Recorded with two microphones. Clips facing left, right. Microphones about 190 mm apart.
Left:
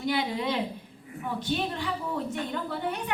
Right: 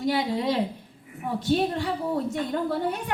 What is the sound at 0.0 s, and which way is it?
A woman's voice, 40° right (ahead or behind).